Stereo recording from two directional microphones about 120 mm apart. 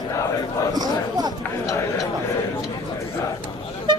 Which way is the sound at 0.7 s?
35° right (ahead or behind).